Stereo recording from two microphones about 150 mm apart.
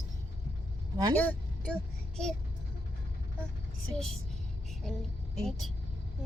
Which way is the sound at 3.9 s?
5° left (ahead or behind).